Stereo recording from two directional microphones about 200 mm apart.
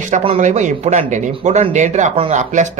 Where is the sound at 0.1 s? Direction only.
35° right (ahead or behind).